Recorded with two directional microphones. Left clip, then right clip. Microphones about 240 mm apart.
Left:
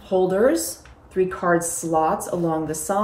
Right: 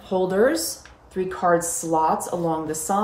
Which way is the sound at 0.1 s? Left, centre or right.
Centre.